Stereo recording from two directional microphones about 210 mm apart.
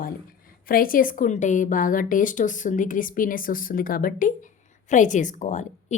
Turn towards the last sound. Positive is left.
turn(degrees=35)  # may be behind; listen again after turning